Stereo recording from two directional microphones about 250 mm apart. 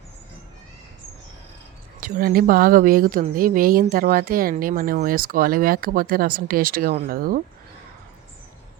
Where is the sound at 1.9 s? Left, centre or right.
Right.